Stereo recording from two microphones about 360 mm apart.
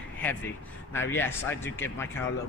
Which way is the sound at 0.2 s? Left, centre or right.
Centre.